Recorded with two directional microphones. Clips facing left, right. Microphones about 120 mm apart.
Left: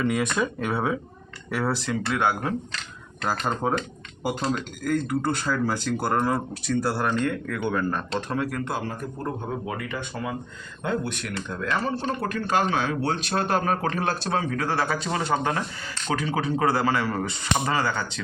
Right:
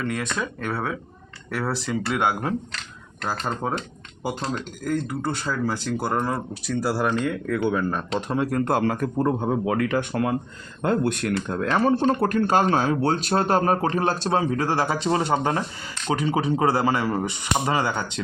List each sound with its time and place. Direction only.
0.0 s speech: 10° left (ahead or behind)
1.5 s speech: centre (ahead or behind)
3.2 s speech: 5° left (ahead or behind)
5.2 s speech: centre (ahead or behind)
7.1 s speech: 15° right (ahead or behind)
8.4 s speech: 40° right (ahead or behind)
8.7 s speech: 75° right (ahead or behind)
9.5 s speech: 90° right; by 10.3 s 60° right (ahead or behind)
10.8 s speech: 45° right (ahead or behind); by 18.2 s 15° right (ahead or behind)